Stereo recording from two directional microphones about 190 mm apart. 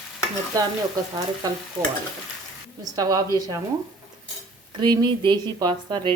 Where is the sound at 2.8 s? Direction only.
20° right (ahead or behind).